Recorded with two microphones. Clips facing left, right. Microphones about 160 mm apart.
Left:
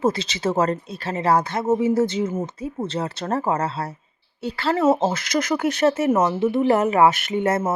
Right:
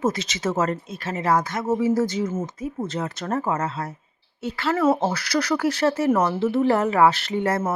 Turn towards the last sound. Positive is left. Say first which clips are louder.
# left 2 dB
turn(degrees=20)  # may be behind; listen again after turning